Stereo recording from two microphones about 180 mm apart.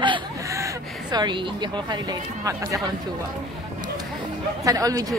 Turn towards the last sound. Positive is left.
turn(degrees=-20)  # may be behind; listen again after turning